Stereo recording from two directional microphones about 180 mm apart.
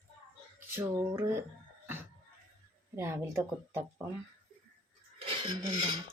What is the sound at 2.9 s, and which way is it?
Filing, 15° right (ahead or behind).